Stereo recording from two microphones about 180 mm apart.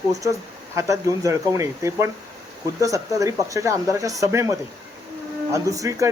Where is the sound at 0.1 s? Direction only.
20° right (ahead or behind).